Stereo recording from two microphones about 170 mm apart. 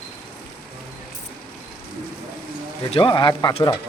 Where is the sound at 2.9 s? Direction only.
30° left (ahead or behind).